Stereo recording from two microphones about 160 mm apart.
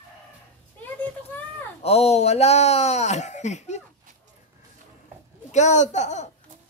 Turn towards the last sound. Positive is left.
turn(degrees=45)  # may be behind; listen again after turning